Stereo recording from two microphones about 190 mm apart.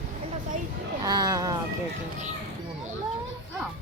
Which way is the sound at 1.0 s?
20° right (ahead or behind).